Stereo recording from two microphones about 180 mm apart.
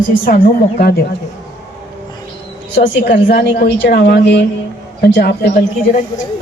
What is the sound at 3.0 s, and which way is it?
A woman's voice, 55° left (ahead or behind).